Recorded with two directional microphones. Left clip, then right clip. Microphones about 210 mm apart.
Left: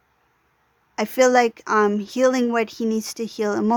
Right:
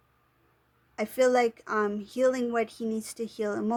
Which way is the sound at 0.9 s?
35° left (ahead or behind).